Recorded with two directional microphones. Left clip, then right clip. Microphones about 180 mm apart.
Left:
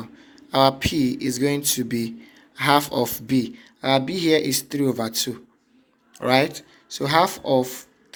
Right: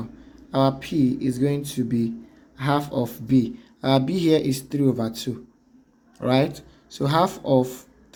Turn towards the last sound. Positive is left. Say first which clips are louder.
# even
turn(degrees=10)  # may be behind; listen again after turning